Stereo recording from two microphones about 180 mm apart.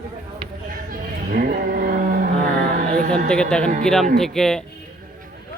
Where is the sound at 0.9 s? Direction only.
55° right (ahead or behind).